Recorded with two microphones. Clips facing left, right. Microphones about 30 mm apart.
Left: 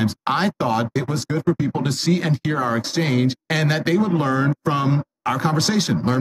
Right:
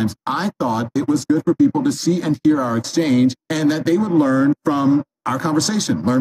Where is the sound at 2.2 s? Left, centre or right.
Left.